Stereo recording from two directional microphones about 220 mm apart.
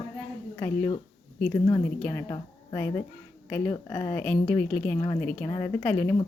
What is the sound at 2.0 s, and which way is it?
Speech, 5° left (ahead or behind).